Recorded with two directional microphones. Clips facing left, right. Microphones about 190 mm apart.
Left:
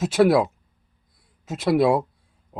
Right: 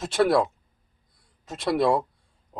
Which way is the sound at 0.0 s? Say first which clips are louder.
Left 4 dB; 5° left (ahead or behind).